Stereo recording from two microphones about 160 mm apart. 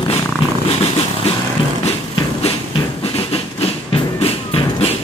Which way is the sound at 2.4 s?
35° left (ahead or behind).